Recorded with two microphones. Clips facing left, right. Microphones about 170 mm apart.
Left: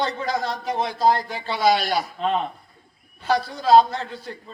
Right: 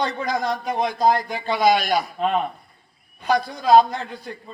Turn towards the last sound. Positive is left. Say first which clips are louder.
# even
turn(degrees=-15)  # may be behind; listen again after turning